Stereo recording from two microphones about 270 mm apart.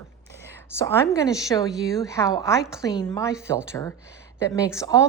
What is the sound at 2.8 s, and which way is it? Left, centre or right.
A woman's voice, centre.